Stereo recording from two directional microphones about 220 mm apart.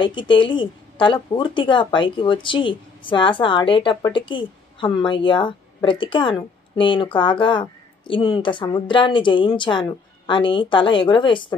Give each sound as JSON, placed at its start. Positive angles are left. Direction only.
{"t": 0.0, "sound": "a woman's voice", "side_deg": 20}